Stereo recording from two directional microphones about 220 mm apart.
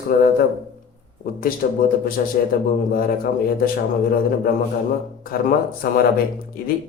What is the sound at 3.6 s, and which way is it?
Speech, 40° left (ahead or behind).